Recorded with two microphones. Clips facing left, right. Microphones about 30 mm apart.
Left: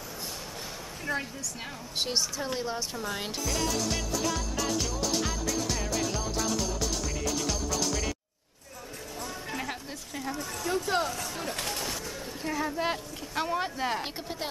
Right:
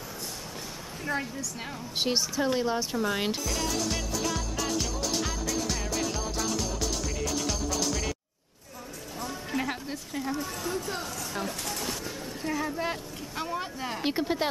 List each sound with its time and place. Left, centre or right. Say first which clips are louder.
1.1 s speech: right 1 dB; centre
3.4 s music: even; centre
9.2 s a sound: right 4 dB; centre
11.4 s speech: left 1 dB; left
12.4 s speech: even; centre
13.3 s speech: left 4 dB; centre
14.0 s speech: right 8 dB; centre